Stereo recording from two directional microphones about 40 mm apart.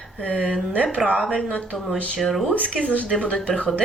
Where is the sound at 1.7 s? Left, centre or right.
Centre.